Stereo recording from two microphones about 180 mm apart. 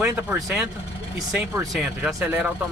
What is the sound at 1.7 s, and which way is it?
Speech, 5° right (ahead or behind).